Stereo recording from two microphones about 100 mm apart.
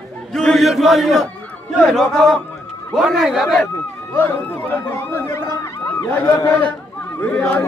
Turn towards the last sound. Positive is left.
turn(degrees=15)  # may be behind; listen again after turning